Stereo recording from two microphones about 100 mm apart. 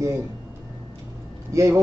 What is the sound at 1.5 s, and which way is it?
Speech, 30° right (ahead or behind).